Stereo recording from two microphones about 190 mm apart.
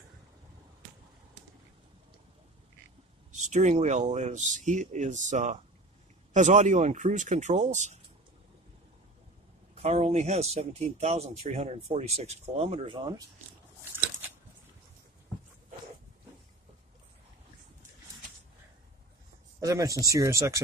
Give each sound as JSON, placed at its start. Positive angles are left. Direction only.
{"t": 3.3, "sound": "speech", "side_deg": -40}
{"t": 9.8, "sound": "speech", "side_deg": -35}
{"t": 19.6, "sound": "speech", "side_deg": -15}